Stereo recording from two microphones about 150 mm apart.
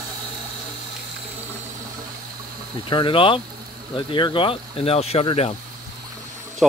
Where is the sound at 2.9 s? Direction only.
35° left (ahead or behind).